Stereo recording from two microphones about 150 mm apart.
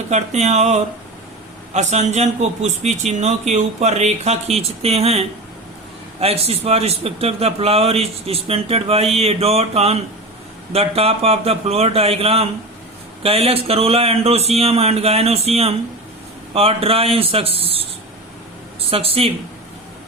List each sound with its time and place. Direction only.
0.1 s a man's voice: 50° right (ahead or behind)